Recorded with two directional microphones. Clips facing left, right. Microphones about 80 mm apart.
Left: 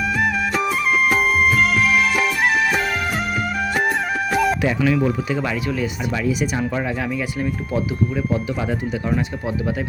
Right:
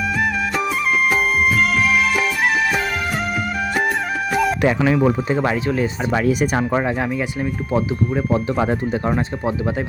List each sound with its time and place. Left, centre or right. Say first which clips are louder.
0.2 s music: left 1 dB; centre
3.8 s music: even; centre
5.3 s speech: right 4 dB; right
6.1 s speech: right 4 dB; right
7.3 s speech: right 2 dB; centre
8.1 s speech: right 3 dB; right